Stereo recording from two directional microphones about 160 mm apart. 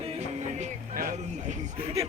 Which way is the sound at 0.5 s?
55° right (ahead or behind).